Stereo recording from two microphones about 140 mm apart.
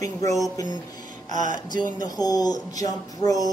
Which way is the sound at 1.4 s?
30° left (ahead or behind).